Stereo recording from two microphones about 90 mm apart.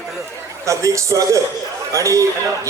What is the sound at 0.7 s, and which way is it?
A man's voice, 35° right (ahead or behind).